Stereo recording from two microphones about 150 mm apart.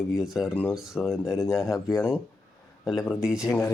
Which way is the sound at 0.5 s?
10° left (ahead or behind).